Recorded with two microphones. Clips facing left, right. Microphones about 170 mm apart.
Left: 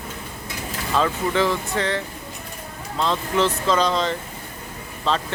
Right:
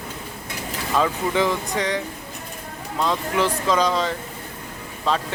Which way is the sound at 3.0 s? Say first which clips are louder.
Left 1 dB; 10° right (ahead or behind).